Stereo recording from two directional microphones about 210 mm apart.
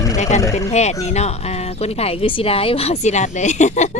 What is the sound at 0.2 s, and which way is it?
Speech, 35° left (ahead or behind).